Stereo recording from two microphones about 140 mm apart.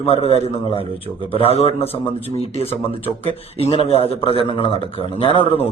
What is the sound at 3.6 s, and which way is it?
A man's voice, 45° left (ahead or behind).